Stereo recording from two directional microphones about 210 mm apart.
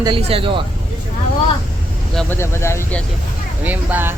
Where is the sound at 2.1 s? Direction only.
10° left (ahead or behind).